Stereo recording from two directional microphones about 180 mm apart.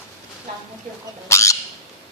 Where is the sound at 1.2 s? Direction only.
15° left (ahead or behind).